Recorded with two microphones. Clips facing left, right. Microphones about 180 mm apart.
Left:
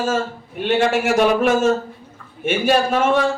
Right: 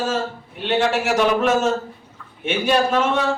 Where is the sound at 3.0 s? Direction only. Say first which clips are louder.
Left 4 dB; 50° left (ahead or behind).